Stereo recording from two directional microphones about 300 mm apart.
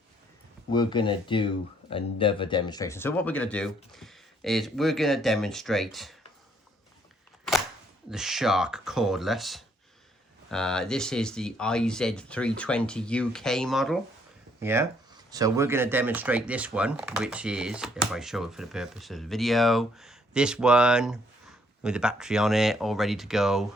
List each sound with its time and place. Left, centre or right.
0.7 s speech: centre
8.1 s speech: centre